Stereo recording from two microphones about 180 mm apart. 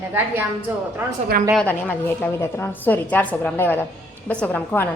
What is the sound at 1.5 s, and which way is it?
A woman's voice, 10° left (ahead or behind).